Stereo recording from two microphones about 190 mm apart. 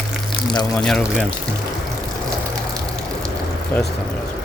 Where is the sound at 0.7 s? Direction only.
5° left (ahead or behind).